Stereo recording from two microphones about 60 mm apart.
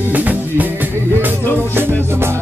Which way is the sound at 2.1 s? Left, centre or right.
Right.